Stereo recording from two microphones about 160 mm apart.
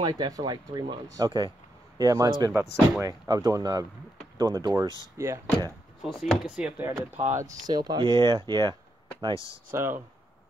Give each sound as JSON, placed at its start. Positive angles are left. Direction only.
{"t": 0.0, "sound": "speech", "side_deg": -25}
{"t": 4.8, "sound": "speech", "side_deg": 20}
{"t": 5.1, "sound": "speech", "side_deg": -20}
{"t": 6.0, "sound": "speech", "side_deg": 0}
{"t": 7.4, "sound": "speech", "side_deg": -25}
{"t": 9.7, "sound": "speech", "side_deg": -15}